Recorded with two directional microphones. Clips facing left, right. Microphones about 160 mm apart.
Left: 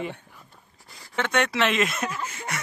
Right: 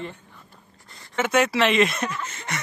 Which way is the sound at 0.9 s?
Centre (ahead or behind).